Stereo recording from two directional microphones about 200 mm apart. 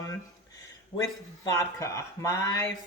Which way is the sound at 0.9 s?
15° left (ahead or behind).